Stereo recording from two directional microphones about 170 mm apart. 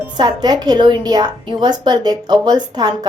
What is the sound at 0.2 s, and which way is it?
A woman's voice, 25° right (ahead or behind).